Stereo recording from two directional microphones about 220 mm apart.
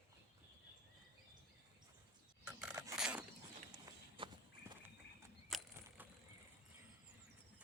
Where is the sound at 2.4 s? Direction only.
5° right (ahead or behind).